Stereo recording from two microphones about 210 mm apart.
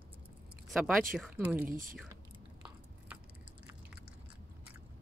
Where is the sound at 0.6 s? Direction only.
5° right (ahead or behind).